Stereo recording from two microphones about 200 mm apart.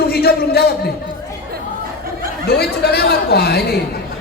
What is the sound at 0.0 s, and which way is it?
Speech, 50° left (ahead or behind).